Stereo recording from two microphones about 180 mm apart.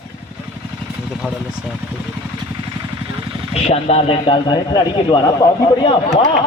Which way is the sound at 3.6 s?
35° left (ahead or behind).